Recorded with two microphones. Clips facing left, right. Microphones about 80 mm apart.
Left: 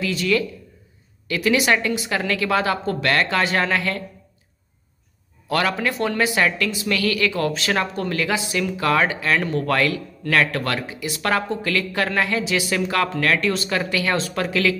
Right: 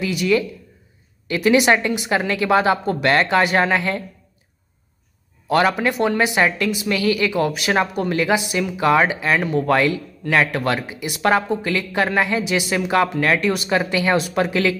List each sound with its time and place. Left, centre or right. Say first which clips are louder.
0.0 s a woman's voice: right 2 dB; centre
5.5 s a woman's voice: right 4 dB; right